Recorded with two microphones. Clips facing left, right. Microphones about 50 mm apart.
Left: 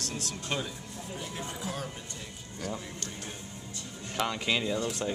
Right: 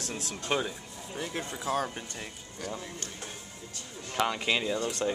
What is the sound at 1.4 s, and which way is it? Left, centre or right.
Speech, right.